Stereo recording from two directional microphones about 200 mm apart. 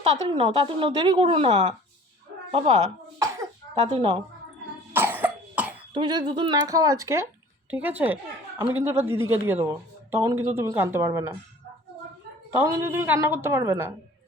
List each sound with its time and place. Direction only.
0.0 s a woman's voice: 25° right (ahead or behind)
3.8 s speech: 30° right (ahead or behind)
4.9 s cough: 10° right (ahead or behind)
5.9 s a woman's voice: 20° right (ahead or behind)
12.5 s speech: 15° right (ahead or behind)